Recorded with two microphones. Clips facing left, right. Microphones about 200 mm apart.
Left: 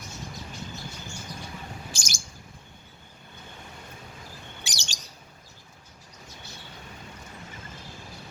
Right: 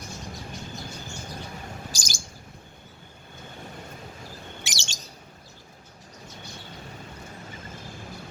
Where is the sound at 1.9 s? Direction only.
35° right (ahead or behind).